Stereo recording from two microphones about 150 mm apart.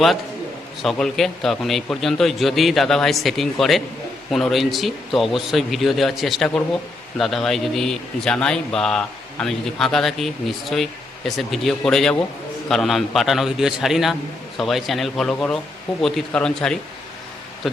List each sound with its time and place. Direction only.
0.8 s a man's voice: centre (ahead or behind)